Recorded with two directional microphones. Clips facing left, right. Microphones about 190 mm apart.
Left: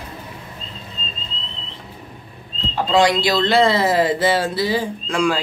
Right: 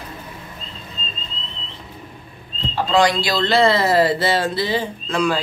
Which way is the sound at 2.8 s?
25° left (ahead or behind).